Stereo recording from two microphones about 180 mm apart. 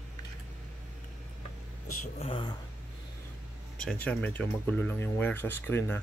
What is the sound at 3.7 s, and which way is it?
Speech, 5° left (ahead or behind).